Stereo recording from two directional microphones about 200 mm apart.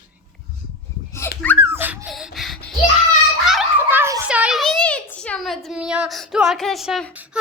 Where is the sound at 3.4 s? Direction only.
5° right (ahead or behind).